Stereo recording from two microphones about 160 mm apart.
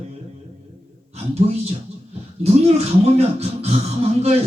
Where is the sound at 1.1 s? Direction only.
40° right (ahead or behind).